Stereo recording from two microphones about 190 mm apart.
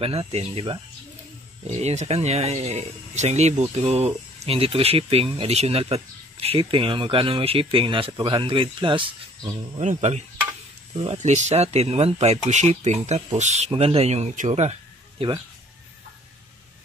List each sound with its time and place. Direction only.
0.0 s speech: 30° right (ahead or behind)
9.8 s speech: 35° right (ahead or behind)